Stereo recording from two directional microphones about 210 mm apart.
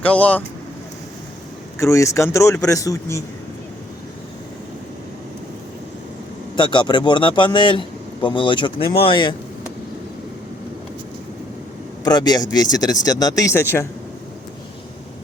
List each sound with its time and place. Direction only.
0.0 s speech: 5° left (ahead or behind)
1.8 s speech: 15° left (ahead or behind)
6.6 s a man's voice: 20° left (ahead or behind)
12.0 s speech: 20° left (ahead or behind)